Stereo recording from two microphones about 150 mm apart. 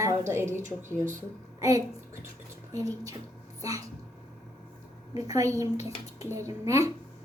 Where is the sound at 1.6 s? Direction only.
20° right (ahead or behind).